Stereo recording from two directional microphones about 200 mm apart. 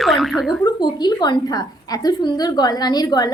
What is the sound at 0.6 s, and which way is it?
A woman's voice, 20° left (ahead or behind).